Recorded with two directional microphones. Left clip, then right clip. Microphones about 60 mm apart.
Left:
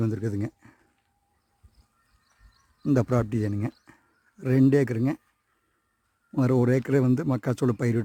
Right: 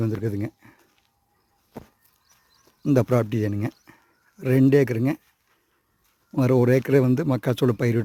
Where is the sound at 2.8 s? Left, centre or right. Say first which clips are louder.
Right 4 dB; centre.